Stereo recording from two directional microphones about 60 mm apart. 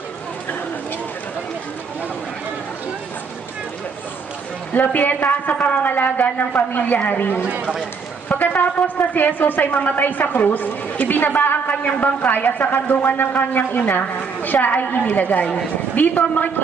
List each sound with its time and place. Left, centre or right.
4.7 s a woman's voice: left
7.4 s speech: centre
8.3 s a woman's voice: left